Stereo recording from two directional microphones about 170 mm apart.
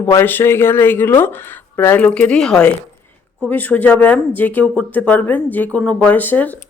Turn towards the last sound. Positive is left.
turn(degrees=10)  # may be behind; listen again after turning